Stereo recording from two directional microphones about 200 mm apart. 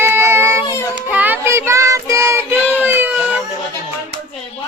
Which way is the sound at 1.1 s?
10° right (ahead or behind).